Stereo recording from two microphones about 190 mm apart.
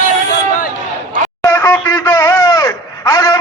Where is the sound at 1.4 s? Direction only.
10° left (ahead or behind).